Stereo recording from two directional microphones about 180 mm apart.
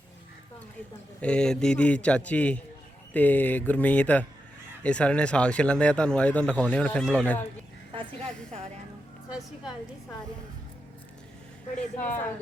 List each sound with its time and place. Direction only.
1.2 s speech: 5° left (ahead or behind)
11.9 s speech: 10° left (ahead or behind)